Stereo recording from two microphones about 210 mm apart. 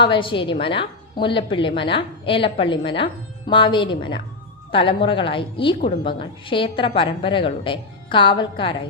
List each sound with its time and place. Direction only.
0.0 s a woman's voice: 25° left (ahead or behind)